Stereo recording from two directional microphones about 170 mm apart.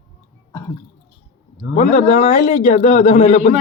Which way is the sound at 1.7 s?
45° left (ahead or behind).